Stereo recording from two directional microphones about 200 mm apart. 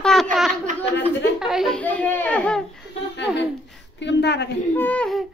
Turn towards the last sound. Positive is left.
turn(degrees=5)  # may be behind; listen again after turning